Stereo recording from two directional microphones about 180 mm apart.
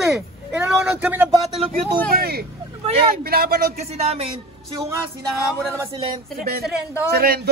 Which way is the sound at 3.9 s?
35° right (ahead or behind).